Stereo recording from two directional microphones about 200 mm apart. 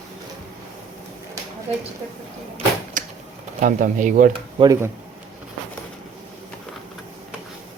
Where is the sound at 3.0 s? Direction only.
40° right (ahead or behind).